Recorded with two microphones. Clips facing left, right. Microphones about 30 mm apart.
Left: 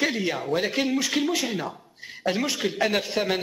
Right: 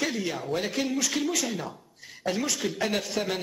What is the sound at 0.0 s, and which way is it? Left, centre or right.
A man's voice, left.